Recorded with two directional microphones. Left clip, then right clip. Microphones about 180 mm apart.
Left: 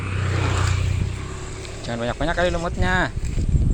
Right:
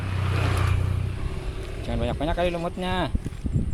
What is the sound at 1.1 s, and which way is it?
Vehicle, 25° left (ahead or behind).